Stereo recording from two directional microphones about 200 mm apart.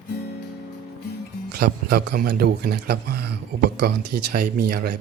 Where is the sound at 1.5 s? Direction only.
50° right (ahead or behind).